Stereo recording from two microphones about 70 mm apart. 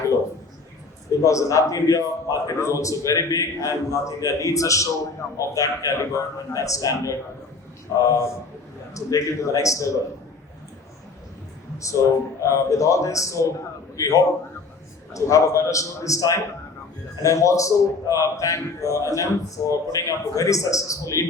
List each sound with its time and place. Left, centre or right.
1.2 s a man's voice: left
12.4 s a man's voice: left